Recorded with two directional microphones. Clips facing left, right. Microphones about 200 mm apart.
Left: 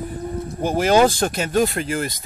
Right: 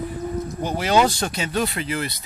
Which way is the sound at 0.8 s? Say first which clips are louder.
Left 4 dB; 50° left (ahead or behind).